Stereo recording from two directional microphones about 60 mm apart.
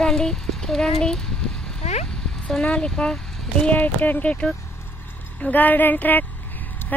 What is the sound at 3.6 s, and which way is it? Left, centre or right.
Speech, left.